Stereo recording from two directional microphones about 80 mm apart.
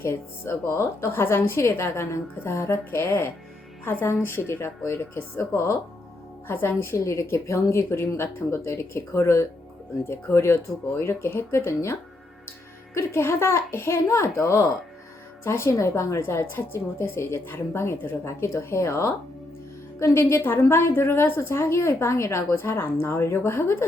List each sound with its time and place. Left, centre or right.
0.0 s a woman's voice: left